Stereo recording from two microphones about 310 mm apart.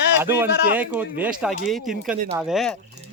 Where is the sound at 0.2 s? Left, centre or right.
Centre.